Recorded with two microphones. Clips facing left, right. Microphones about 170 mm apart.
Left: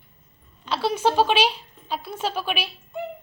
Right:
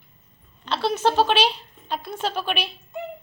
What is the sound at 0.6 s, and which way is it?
A woman's voice, 10° left (ahead or behind).